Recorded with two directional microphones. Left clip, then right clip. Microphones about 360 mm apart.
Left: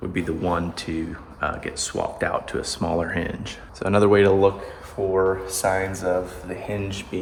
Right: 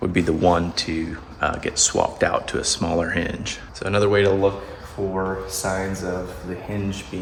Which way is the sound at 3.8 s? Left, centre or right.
Centre.